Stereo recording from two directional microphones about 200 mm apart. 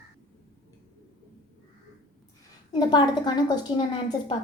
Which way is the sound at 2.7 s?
20° left (ahead or behind).